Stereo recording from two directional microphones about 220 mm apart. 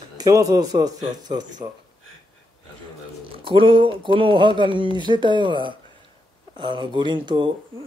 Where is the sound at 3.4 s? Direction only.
25° right (ahead or behind).